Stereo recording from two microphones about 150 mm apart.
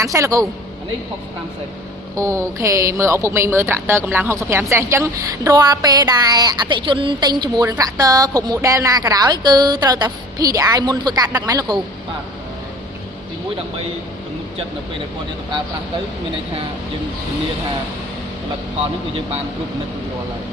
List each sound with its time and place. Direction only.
0.0 s speech: 20° right (ahead or behind)
2.1 s speech: 20° right (ahead or behind)